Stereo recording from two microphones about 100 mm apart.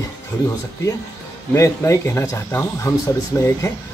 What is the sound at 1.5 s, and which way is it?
A man's voice, 30° left (ahead or behind).